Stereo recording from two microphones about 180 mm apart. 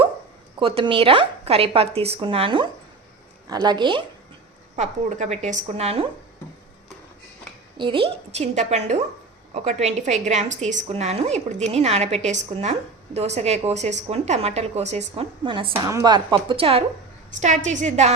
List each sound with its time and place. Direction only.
0.6 s a woman's voice: 30° right (ahead or behind)
4.8 s a woman's voice: 40° right (ahead or behind)
7.8 s a woman's voice: 30° right (ahead or behind)
17.4 s a woman's voice: 40° right (ahead or behind)